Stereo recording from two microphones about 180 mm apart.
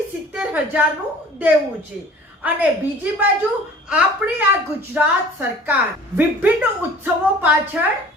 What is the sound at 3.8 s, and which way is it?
A woman's voice, 10° right (ahead or behind).